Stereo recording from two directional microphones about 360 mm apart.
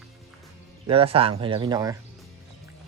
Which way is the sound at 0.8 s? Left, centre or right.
Centre.